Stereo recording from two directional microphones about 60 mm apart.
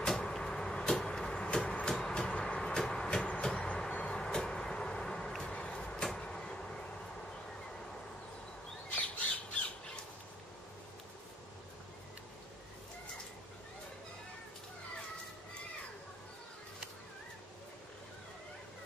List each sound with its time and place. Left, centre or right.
0.0 s vehicle: centre
8.9 s squawk: left